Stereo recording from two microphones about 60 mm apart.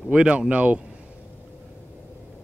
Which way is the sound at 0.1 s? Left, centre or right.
Centre.